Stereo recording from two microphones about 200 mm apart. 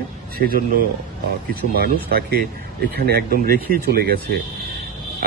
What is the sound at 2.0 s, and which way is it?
A man's voice, 50° right (ahead or behind).